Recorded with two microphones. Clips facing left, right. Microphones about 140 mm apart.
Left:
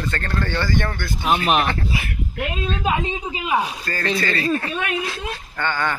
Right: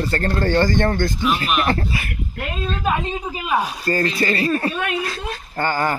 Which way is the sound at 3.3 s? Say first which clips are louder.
Even; 15° left (ahead or behind).